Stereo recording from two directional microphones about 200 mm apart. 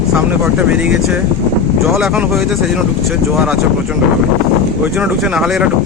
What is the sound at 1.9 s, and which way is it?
Speech, 5° right (ahead or behind).